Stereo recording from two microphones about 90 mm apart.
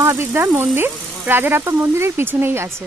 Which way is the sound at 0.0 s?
30° right (ahead or behind).